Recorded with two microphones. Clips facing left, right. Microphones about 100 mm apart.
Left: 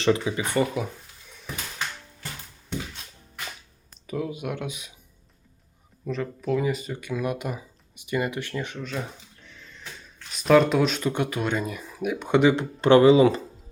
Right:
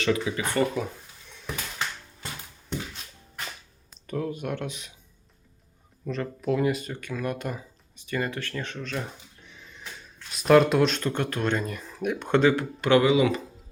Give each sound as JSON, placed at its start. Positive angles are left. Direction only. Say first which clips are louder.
{"t": 0.0, "sound": "speech", "louder": "left 3 dB", "side_deg": 25}
{"t": 0.5, "sound": "speech", "louder": "even", "side_deg": 10}
{"t": 4.0, "sound": "speech", "louder": "even", "side_deg": 5}
{"t": 6.1, "sound": "speech", "louder": "left 1 dB", "side_deg": 0}
{"t": 7.0, "sound": "speech", "louder": "left 2 dB", "side_deg": 10}
{"t": 10.3, "sound": "speech", "louder": "even", "side_deg": 0}
{"t": 12.8, "sound": "speech", "louder": "left 5 dB", "side_deg": 30}